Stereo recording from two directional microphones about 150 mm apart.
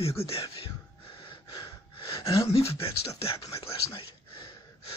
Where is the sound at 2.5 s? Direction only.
40° left (ahead or behind).